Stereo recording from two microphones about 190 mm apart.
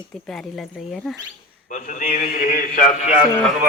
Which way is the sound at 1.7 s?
45° left (ahead or behind).